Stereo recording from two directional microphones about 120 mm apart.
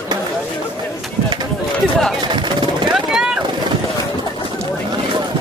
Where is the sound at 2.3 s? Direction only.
40° right (ahead or behind).